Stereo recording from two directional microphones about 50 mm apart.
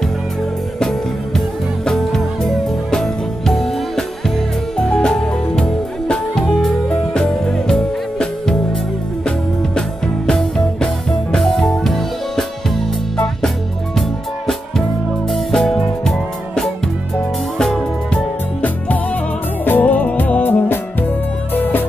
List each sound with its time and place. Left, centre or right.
0.7 s music: centre
9.8 s music: centre
15.2 s music: centre
19.6 s music: left